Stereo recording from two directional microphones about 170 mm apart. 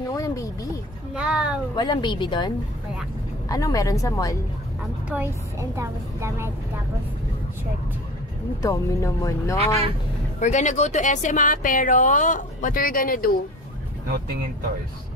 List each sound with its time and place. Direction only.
0.1 s a sound: 20° left (ahead or behind)
1.1 s speech: 5° right (ahead or behind)
1.8 s a woman's voice: 25° left (ahead or behind)
5.1 s a woman's voice: 15° right (ahead or behind)
8.6 s speech: 20° left (ahead or behind)
10.4 s speech: 45° left (ahead or behind)